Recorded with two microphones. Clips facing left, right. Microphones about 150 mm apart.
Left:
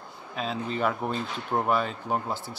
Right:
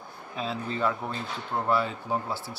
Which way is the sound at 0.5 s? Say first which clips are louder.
Left 1 dB; 20° left (ahead or behind).